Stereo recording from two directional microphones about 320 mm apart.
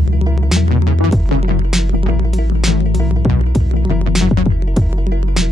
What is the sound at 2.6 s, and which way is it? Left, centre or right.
Music, centre.